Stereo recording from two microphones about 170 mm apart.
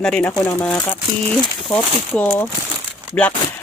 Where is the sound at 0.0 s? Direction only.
5° left (ahead or behind).